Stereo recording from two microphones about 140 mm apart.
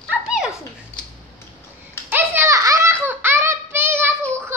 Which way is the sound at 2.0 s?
15° right (ahead or behind).